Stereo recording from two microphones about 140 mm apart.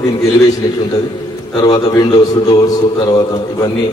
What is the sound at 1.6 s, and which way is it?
Speech, 30° left (ahead or behind).